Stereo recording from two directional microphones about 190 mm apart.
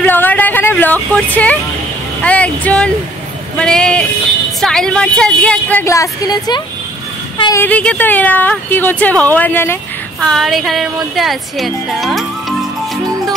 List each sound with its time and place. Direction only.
0.0 s vehicle: 10° left (ahead or behind)
2.2 s a woman's voice: 5° left (ahead or behind); by 7.6 s 25° left (ahead or behind)
7.6 s speech: 5° left (ahead or behind)